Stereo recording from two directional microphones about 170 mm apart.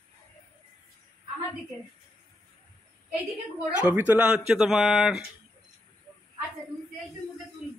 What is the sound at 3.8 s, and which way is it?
Speech, 10° right (ahead or behind).